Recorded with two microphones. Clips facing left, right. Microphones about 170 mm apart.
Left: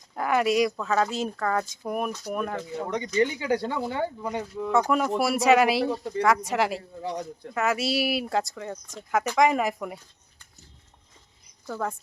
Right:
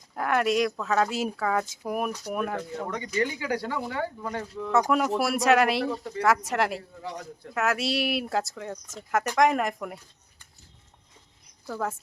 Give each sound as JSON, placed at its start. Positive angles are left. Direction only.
{"t": 0.2, "sound": "speech", "side_deg": 0}
{"t": 2.7, "sound": "speech", "side_deg": 20}
{"t": 4.7, "sound": "speech", "side_deg": 0}
{"t": 5.8, "sound": "speech", "side_deg": 25}
{"t": 6.2, "sound": "speech", "side_deg": 0}
{"t": 11.7, "sound": "speech", "side_deg": -5}